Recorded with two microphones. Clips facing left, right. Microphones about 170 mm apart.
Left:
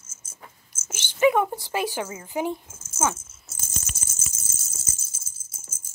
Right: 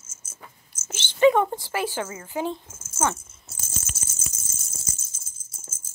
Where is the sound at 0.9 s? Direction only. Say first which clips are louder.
Right 2 dB; 10° left (ahead or behind).